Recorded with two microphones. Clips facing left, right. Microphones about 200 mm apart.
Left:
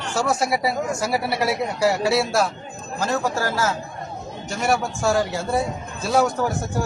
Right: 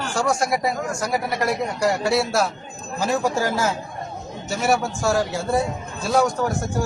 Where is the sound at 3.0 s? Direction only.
10° right (ahead or behind).